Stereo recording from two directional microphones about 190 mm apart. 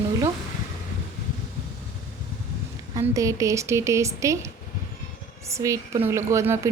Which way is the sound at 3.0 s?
15° right (ahead or behind).